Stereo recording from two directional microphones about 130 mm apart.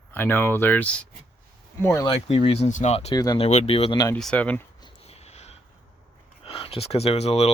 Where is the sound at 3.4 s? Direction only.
55° left (ahead or behind).